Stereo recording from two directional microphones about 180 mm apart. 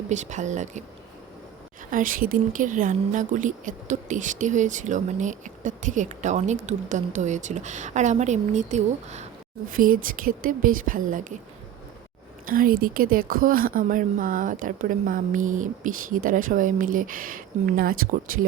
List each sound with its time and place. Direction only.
0.1 s speech: 40° right (ahead or behind)
1.9 s a woman's voice: 50° right (ahead or behind)
9.7 s a woman's voice: 50° right (ahead or behind)
12.5 s a woman's voice: 50° right (ahead or behind)